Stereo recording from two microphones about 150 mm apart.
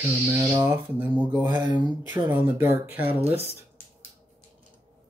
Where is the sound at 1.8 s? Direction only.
30° right (ahead or behind).